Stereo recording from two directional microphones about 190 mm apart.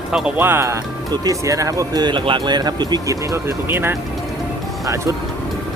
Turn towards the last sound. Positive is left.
turn(degrees=-15)  # may be behind; listen again after turning